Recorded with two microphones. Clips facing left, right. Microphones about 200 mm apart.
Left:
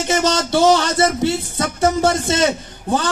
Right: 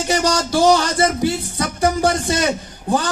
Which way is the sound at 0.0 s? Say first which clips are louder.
Left 1 dB; 25° left (ahead or behind).